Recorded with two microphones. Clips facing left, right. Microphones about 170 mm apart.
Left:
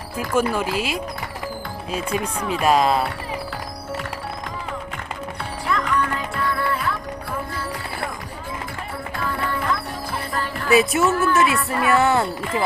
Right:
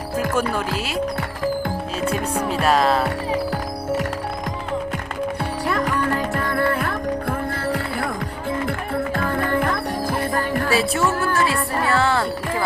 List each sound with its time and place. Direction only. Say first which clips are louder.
0.3 s speech: left 6 dB; 10° left (ahead or behind)
2.4 s music: right 2 dB; 40° right (ahead or behind)
2.6 s speech: left 1 dB; 10° left (ahead or behind)
5.6 s music: right 1 dB; 40° right (ahead or behind); by 7.8 s 55° right (ahead or behind)
9.1 s music: right 3 dB; 50° right (ahead or behind)
10.8 s speech: left 6 dB; 20° left (ahead or behind)
11.4 s music: even; 35° right (ahead or behind)
11.9 s speech: left 2 dB; 20° left (ahead or behind)